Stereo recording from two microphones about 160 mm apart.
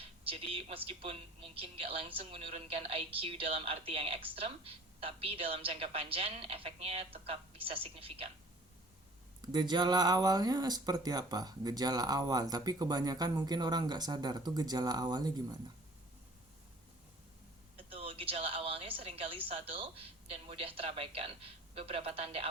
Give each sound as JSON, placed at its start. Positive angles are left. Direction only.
{"t": 0.0, "sound": "speech", "side_deg": -35}
{"t": 9.4, "sound": "speech", "side_deg": -25}
{"t": 17.7, "sound": "a woman's voice", "side_deg": -35}